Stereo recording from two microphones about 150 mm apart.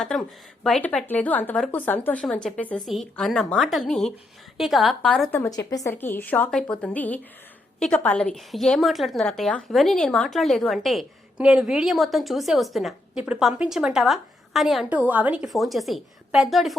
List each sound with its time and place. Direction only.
0.0 s a woman's voice: 5° left (ahead or behind)
5.5 s a woman's voice: 25° left (ahead or behind)
5.9 s a woman's voice: 15° left (ahead or behind)